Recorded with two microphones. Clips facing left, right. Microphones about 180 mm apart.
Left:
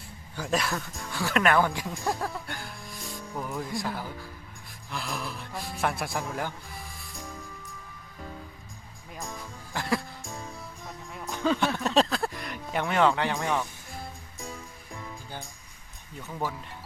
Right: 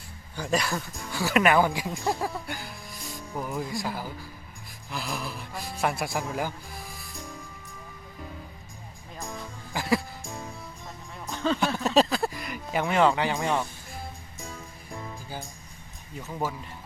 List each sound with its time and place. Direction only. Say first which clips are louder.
0.3 s speech: right 1 dB; centre (ahead or behind)
9.7 s music: right 3 dB; 5° right (ahead or behind)
13.4 s speech: right 2 dB; 20° right (ahead or behind)